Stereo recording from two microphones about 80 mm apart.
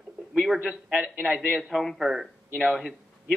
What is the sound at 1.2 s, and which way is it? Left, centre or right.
Speech, centre.